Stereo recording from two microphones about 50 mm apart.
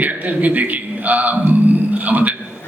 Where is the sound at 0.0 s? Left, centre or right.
Right.